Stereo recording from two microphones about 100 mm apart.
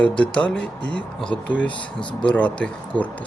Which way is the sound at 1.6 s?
55° left (ahead or behind).